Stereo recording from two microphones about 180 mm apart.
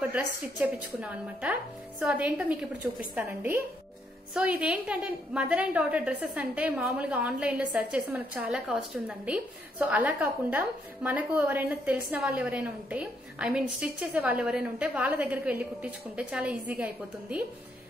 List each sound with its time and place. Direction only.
0.0 s a woman's voice: 10° right (ahead or behind)